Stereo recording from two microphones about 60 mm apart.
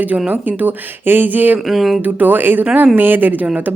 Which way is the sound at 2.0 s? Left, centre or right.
Right.